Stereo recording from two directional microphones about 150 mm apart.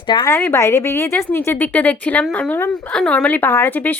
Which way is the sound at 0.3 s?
20° left (ahead or behind).